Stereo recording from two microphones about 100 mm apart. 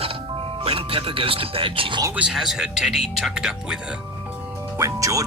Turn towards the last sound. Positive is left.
turn(degrees=-35)  # may be behind; listen again after turning